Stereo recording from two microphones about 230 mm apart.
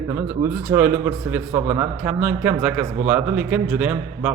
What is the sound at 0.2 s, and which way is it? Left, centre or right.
A man's voice, centre.